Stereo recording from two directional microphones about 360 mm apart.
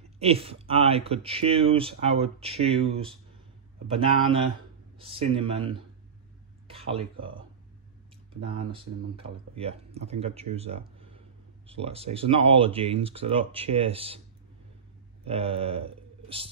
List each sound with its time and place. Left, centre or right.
0.2 s speech: centre
8.5 s speech: centre
15.2 s speech: centre